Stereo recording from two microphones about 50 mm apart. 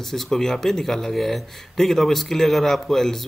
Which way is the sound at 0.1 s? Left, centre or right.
Centre.